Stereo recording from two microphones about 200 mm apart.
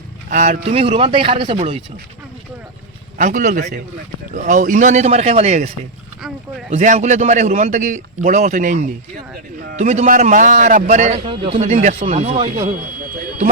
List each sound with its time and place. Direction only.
0.3 s speech: 35° right (ahead or behind)
3.2 s a man's voice: 40° right (ahead or behind)